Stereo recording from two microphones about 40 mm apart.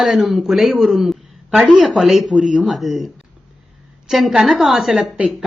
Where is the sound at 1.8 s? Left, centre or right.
Centre.